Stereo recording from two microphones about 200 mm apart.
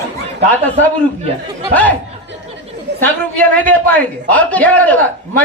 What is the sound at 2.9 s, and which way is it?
Chatter, 60° right (ahead or behind).